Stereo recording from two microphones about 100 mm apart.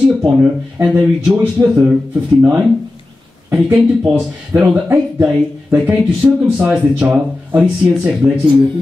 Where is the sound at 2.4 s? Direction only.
20° right (ahead or behind).